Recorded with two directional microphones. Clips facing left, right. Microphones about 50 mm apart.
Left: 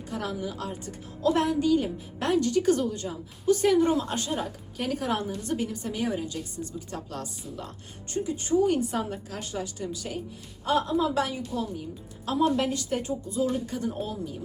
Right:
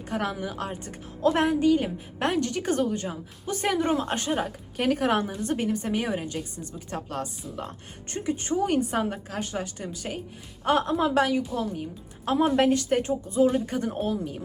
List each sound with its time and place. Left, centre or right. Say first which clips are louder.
0.1 s a woman's voice: right 3 dB; right
8.5 s speech: left 3 dB; right
8.8 s a woman's voice: right 3 dB; right